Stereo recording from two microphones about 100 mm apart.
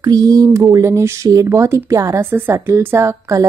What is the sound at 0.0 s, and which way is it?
Speech, 40° right (ahead or behind).